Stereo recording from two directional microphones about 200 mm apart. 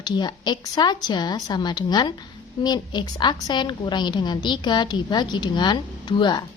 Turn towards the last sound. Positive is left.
turn(degrees=20)  # may be behind; listen again after turning